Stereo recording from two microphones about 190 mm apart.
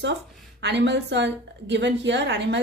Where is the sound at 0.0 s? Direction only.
65° right (ahead or behind).